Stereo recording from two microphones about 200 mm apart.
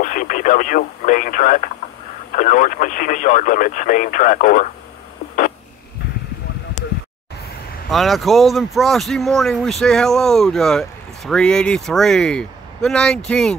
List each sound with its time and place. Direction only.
0.0 s speech: 40° left (ahead or behind)
7.9 s speech: centre (ahead or behind)